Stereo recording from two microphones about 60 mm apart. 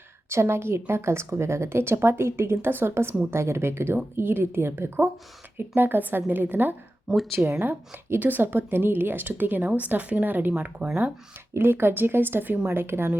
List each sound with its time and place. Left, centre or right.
0.3 s a woman's voice: right
11.5 s a woman's voice: right